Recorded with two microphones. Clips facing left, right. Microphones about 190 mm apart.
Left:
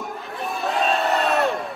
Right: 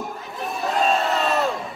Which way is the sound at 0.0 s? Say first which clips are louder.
Even; centre (ahead or behind).